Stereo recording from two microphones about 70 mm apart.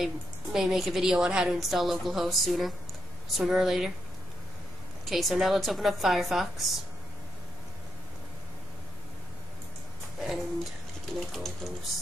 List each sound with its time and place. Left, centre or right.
0.0 s a woman's voice: centre
5.0 s a woman's voice: centre
10.1 s a sound: centre
11.3 s a woman's voice: centre